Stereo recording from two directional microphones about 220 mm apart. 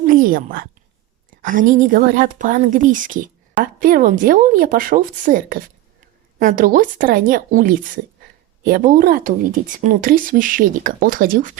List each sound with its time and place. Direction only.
0.0 s a woman's voice: 40° right (ahead or behind)